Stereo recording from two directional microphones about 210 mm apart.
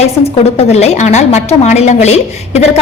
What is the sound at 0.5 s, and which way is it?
A woman's voice, 30° left (ahead or behind).